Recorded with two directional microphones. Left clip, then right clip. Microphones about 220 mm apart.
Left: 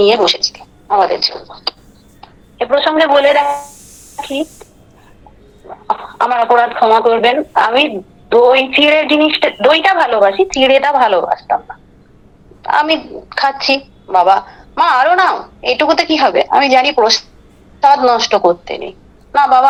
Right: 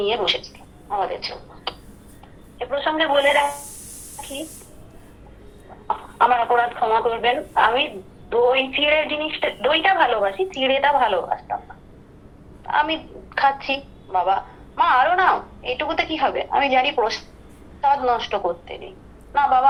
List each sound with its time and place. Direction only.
0.0 s a woman's voice: 60° left (ahead or behind)
4.2 s a sound: 55° left (ahead or behind)
5.6 s speech: 55° left (ahead or behind)
12.6 s a woman's voice: 60° left (ahead or behind)